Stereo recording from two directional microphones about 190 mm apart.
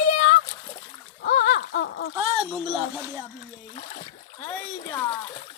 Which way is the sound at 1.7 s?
70° left (ahead or behind).